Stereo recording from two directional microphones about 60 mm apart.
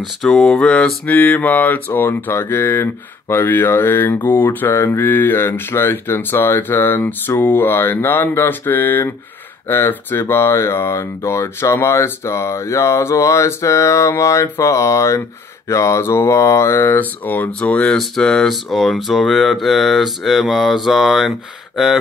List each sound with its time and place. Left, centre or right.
0.2 s speech: centre
0.6 s mantra: centre
1.1 s speech: left
16.0 s speech: left
16.9 s speech: left
17.5 s speech: centre